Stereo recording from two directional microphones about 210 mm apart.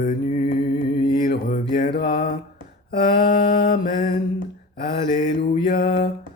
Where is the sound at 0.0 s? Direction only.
35° left (ahead or behind).